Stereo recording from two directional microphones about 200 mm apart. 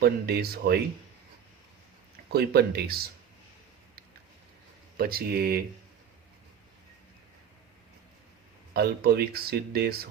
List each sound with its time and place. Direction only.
0.0 s speech: 50° right (ahead or behind)
2.3 s speech: 55° right (ahead or behind)
4.9 s speech: 50° right (ahead or behind)
8.7 s speech: 50° right (ahead or behind)